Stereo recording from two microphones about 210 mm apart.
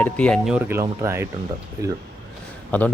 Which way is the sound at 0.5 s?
10° right (ahead or behind).